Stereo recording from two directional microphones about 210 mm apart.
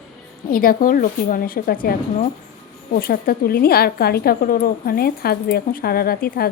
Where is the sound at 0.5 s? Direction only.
45° left (ahead or behind).